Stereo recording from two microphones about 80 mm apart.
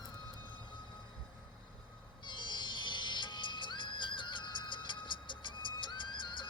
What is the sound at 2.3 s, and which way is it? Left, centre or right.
Music, left.